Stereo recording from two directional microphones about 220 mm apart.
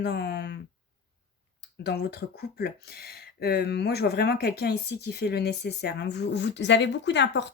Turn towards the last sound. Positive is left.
turn(degrees=50)  # may be behind; listen again after turning